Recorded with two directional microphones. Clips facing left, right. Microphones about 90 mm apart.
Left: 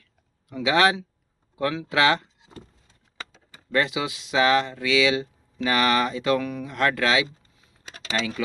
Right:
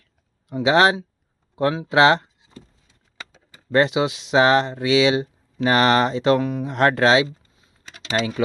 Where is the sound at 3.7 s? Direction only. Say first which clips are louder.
Right 6 dB; 30° right (ahead or behind).